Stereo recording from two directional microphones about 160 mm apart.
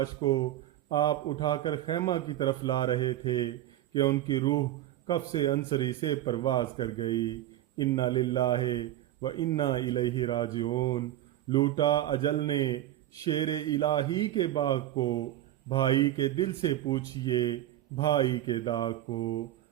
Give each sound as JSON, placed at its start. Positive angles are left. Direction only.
{"t": 0.0, "sound": "a man's voice", "side_deg": 25}